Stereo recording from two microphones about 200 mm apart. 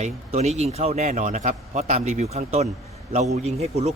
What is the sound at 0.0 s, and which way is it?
Speech, 35° right (ahead or behind).